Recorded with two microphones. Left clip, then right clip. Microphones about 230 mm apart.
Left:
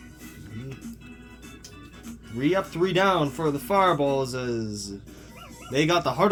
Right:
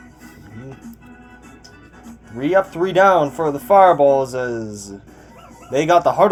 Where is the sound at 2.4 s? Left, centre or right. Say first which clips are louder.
Right 7 dB; left.